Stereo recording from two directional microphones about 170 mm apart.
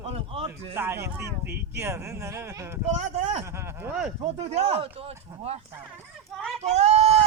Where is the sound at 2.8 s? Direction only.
40° right (ahead or behind).